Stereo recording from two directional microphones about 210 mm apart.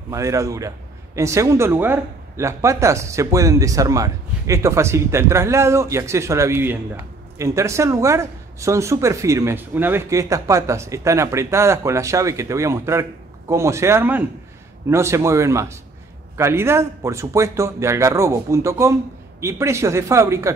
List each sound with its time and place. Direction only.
0.1 s a man's voice: 15° right (ahead or behind)